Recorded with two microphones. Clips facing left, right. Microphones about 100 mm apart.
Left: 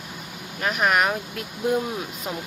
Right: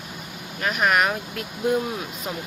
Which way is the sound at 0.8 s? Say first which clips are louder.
Even; 15° left (ahead or behind).